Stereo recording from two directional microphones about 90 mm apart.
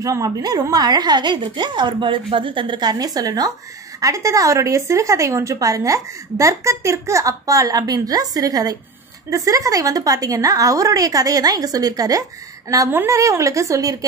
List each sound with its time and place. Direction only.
0.0 s a woman's voice: 40° right (ahead or behind)